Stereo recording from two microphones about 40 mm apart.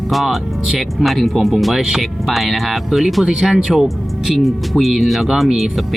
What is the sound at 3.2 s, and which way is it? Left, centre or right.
Speech, right.